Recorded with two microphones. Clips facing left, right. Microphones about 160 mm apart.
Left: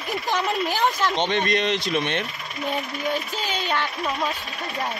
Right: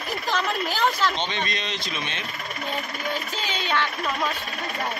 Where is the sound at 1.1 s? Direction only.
65° left (ahead or behind).